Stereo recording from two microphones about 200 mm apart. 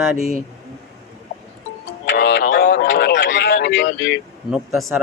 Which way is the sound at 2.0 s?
60° left (ahead or behind).